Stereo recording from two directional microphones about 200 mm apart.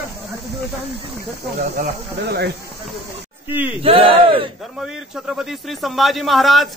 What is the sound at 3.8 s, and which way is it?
Speech, 25° right (ahead or behind).